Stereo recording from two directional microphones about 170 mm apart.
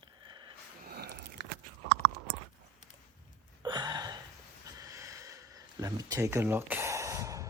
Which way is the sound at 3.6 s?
25° right (ahead or behind).